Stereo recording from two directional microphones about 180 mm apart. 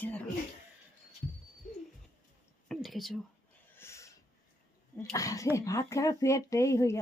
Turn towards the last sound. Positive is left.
turn(degrees=15)  # may be behind; listen again after turning